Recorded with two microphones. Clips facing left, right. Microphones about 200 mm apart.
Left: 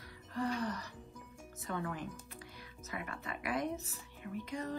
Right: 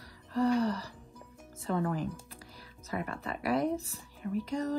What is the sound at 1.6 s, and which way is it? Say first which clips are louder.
Speech: right 8 dB; 30° right (ahead or behind).